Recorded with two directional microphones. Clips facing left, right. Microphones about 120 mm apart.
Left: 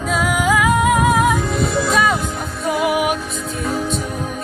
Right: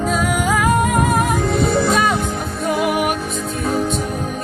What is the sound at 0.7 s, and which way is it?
Music, 45° right (ahead or behind).